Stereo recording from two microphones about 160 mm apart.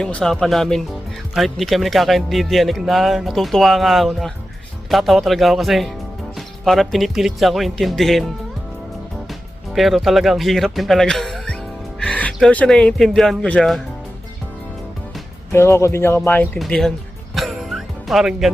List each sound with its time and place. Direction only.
0.0 s speech: 5° left (ahead or behind)
9.7 s speech: centre (ahead or behind)
15.5 s speech: 15° left (ahead or behind)
17.3 s music: centre (ahead or behind)